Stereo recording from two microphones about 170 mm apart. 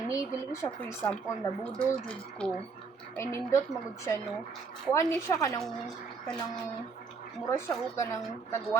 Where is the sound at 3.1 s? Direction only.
15° left (ahead or behind).